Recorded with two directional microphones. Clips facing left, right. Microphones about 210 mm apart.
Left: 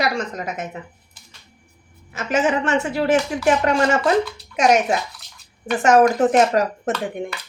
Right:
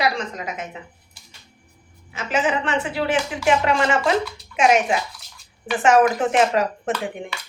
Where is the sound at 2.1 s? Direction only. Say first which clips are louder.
Left 3 dB; 45° left (ahead or behind).